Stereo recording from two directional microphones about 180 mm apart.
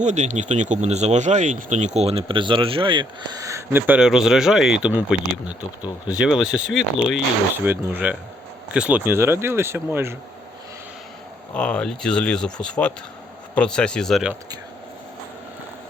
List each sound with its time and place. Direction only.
0.0 s speech: 40° right (ahead or behind); by 10.2 s 15° right (ahead or behind)
11.5 s speech: 5° left (ahead or behind)